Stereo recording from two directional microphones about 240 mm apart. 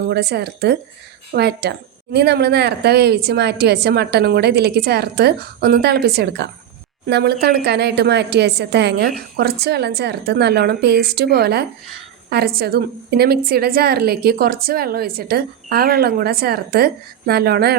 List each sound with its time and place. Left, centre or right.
0.1 s a woman's voice: right